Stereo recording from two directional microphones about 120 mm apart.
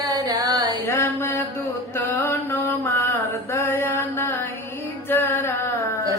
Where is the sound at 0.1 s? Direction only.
30° right (ahead or behind).